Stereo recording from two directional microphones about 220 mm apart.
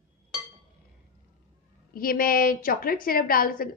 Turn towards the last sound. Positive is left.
turn(degrees=40)  # may be behind; listen again after turning